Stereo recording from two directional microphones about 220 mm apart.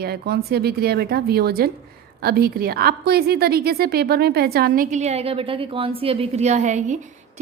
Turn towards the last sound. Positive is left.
turn(degrees=-35)  # may be behind; listen again after turning